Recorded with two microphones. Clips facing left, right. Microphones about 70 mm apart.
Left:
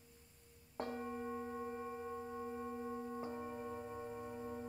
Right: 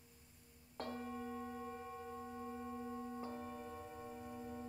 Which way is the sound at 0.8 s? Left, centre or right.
Centre.